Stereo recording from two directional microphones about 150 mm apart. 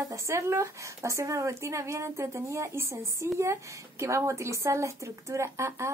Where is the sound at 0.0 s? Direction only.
20° right (ahead or behind).